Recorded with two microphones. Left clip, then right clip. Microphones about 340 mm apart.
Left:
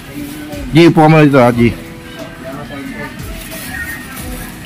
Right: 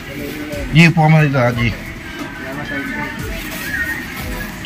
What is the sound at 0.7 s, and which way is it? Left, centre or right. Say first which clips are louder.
Speech: left 6 dB; centre.